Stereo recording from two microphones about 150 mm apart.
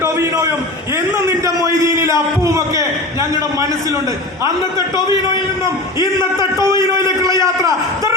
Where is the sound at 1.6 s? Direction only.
20° right (ahead or behind).